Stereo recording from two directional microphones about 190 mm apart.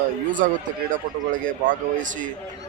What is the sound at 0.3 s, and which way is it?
Speech, 45° right (ahead or behind).